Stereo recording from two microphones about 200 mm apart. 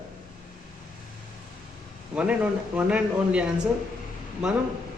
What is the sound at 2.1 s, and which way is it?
Speech, 5° right (ahead or behind).